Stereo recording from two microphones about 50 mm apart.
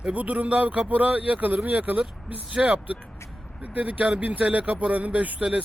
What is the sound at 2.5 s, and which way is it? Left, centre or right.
Speech, centre.